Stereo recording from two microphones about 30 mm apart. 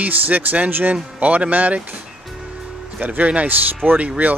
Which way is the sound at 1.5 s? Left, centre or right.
Right.